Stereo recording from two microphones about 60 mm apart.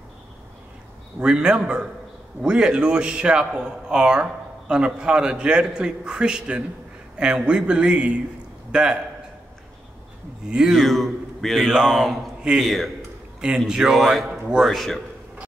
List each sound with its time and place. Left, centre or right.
1.2 s a man's voice: centre
10.5 s a man's voice: centre
10.8 s a man's voice: centre
13.7 s a man's voice: centre